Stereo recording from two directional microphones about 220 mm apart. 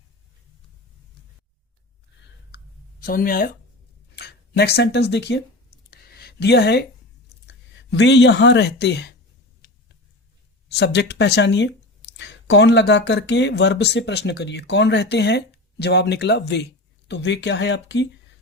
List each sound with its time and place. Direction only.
3.0 s speech: 40° left (ahead or behind)
5.9 s a sound: 45° left (ahead or behind)
7.4 s speech: 55° left (ahead or behind)
10.7 s speech: 50° left (ahead or behind)